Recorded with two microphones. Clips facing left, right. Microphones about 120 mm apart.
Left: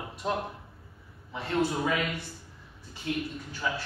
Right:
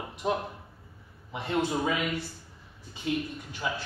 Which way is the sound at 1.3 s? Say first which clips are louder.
Even; 20° right (ahead or behind).